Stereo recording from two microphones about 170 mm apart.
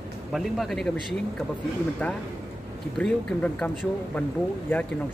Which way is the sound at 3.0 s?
5° left (ahead or behind).